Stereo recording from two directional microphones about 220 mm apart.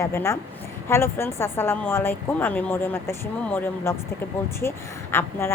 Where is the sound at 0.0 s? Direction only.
10° left (ahead or behind).